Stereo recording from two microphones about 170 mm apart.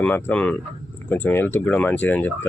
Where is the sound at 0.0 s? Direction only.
10° left (ahead or behind).